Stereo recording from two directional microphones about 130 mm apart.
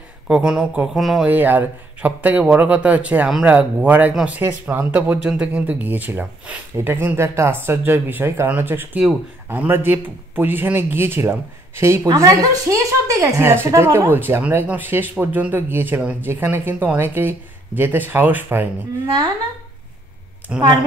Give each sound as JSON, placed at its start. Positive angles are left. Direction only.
{"t": 0.3, "sound": "speech", "side_deg": -5}
{"t": 1.3, "sound": "a man's voice", "side_deg": -15}
{"t": 20.5, "sound": "a man's voice", "side_deg": -10}